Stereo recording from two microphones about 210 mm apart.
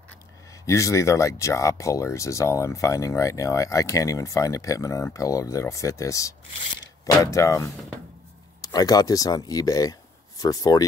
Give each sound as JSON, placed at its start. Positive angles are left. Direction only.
{"t": 0.7, "sound": "speech", "side_deg": 15}